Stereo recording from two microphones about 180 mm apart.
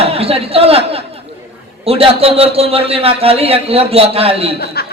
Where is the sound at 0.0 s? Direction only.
35° right (ahead or behind).